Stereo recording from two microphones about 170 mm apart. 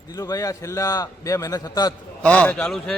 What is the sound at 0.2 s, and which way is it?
A man's voice, 20° left (ahead or behind).